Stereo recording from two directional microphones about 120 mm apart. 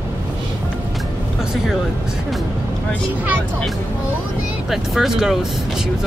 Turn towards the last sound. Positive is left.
turn(degrees=-5)  # may be behind; listen again after turning